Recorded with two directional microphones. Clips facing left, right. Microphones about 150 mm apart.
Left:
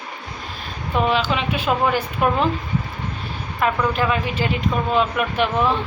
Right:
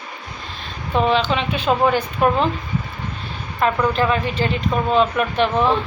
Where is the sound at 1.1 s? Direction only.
5° left (ahead or behind).